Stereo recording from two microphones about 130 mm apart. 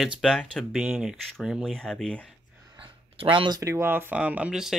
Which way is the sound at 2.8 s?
40° right (ahead or behind).